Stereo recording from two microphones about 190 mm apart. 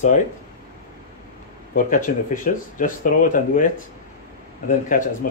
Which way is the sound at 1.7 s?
45° left (ahead or behind).